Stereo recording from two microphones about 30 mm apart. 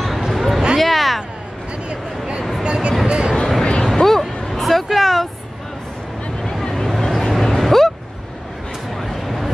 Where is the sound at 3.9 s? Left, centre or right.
Centre.